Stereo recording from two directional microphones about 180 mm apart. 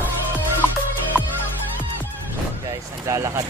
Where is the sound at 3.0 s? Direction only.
15° right (ahead or behind).